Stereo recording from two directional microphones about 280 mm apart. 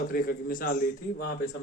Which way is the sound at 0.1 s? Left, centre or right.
Left.